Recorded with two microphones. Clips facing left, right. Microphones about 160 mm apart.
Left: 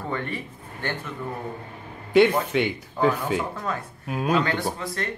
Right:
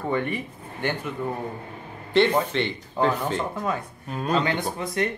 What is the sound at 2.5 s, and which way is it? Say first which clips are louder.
Speech: left 2 dB; 10° left (ahead or behind).